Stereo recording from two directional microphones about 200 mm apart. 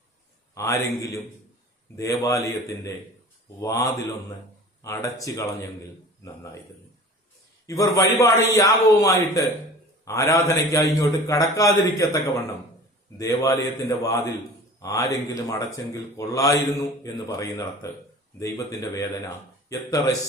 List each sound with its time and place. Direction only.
0.5 s speech: 15° left (ahead or behind)
7.7 s speech: 15° left (ahead or behind)